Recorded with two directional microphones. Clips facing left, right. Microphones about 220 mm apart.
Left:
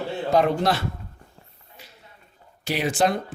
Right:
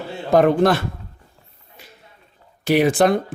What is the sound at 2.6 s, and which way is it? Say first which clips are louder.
Speech: right 7 dB; 55° right (ahead or behind).